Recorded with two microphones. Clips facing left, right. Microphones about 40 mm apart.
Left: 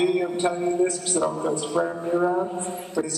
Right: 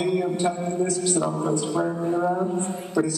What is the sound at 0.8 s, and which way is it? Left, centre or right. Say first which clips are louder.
A woman's voice: even; left.